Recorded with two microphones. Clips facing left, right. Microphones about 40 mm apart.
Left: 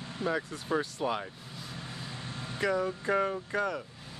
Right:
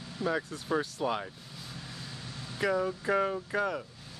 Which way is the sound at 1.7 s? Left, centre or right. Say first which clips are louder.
Left 3 dB; left.